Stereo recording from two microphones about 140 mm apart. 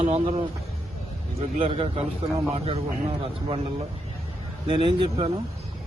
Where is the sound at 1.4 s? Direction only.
45° right (ahead or behind).